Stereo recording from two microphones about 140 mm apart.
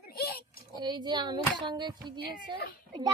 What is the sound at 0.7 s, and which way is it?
Speech, 30° right (ahead or behind).